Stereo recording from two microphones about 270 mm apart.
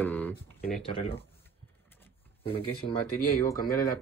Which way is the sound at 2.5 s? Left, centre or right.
Centre.